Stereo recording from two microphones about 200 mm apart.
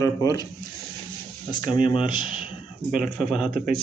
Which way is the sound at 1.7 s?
25° left (ahead or behind).